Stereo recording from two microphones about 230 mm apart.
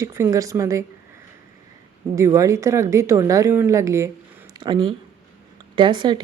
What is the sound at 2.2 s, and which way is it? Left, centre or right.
Speech, centre.